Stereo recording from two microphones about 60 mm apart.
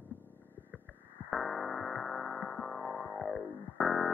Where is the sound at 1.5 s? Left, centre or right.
Centre.